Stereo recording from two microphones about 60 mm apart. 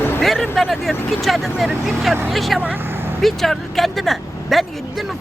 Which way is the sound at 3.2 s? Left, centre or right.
Centre.